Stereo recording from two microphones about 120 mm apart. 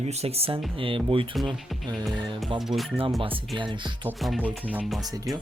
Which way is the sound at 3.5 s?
40° right (ahead or behind).